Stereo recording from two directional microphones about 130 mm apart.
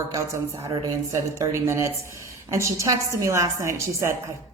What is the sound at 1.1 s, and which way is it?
A woman's voice, 25° right (ahead or behind).